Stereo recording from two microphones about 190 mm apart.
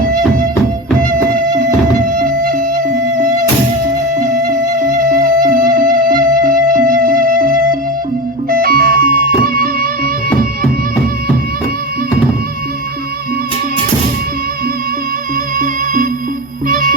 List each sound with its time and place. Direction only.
0.9 s music: 45° right (ahead or behind)
15.5 s music: 45° right (ahead or behind)